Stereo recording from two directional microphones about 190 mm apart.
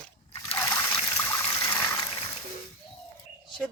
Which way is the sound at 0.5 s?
10° left (ahead or behind).